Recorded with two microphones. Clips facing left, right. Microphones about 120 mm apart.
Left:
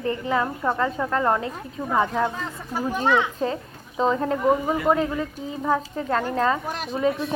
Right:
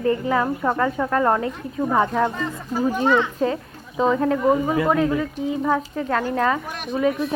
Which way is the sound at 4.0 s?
Centre (ahead or behind).